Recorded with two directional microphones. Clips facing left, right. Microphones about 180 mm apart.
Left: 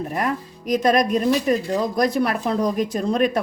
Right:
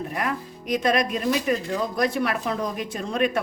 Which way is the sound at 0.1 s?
45° left (ahead or behind).